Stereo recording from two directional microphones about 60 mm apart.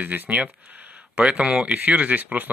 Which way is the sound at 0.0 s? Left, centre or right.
Right.